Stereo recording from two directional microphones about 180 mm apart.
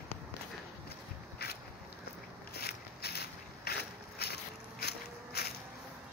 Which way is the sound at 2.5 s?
60° left (ahead or behind).